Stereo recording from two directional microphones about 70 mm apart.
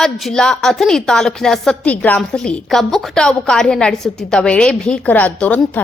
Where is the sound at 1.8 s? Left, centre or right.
Left.